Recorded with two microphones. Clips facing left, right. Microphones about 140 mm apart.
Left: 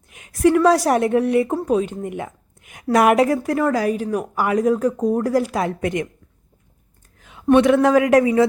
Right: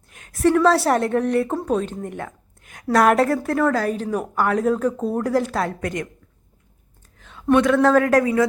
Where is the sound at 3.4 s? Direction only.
5° left (ahead or behind).